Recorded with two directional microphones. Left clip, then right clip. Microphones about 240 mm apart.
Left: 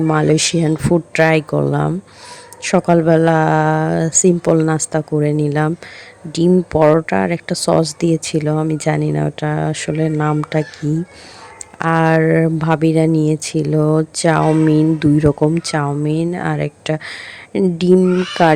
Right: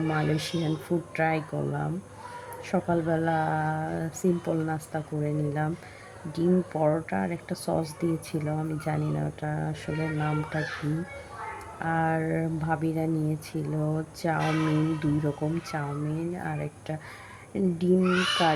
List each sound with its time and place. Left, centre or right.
0.1 s speech: left
11.8 s speech: left